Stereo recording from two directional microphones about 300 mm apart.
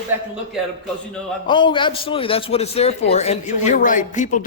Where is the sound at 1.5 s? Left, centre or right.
Centre.